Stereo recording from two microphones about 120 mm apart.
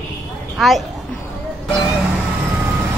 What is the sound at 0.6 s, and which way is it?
Speech, centre (ahead or behind).